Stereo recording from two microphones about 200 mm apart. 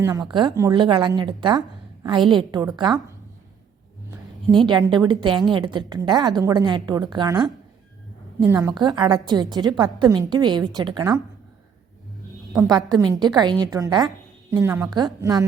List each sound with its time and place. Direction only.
0.0 s a woman's voice: 15° right (ahead or behind)
4.5 s a woman's voice: 25° right (ahead or behind)
8.4 s a woman's voice: 15° right (ahead or behind)
12.6 s a woman's voice: 20° right (ahead or behind)